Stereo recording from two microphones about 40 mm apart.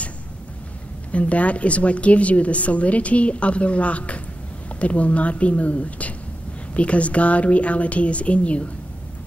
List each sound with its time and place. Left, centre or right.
1.1 s a woman's voice: left